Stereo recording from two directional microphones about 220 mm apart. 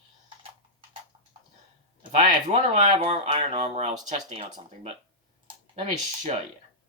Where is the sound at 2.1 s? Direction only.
30° right (ahead or behind).